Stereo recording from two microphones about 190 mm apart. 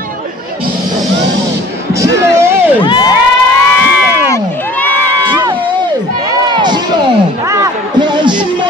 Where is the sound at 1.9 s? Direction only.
15° right (ahead or behind).